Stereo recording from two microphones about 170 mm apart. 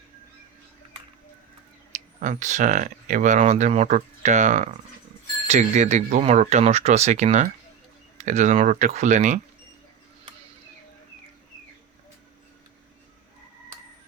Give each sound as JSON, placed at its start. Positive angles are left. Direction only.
{"t": 2.2, "sound": "speech", "side_deg": -45}